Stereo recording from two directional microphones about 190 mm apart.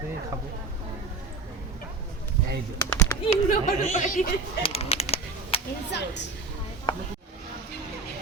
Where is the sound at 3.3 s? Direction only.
40° left (ahead or behind).